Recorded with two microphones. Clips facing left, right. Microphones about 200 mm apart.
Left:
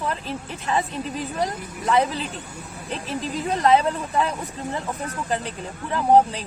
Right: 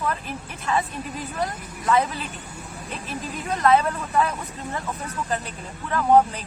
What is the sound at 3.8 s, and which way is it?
Speech, 20° left (ahead or behind).